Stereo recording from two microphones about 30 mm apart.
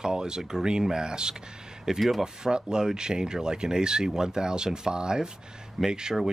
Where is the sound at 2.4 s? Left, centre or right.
Right.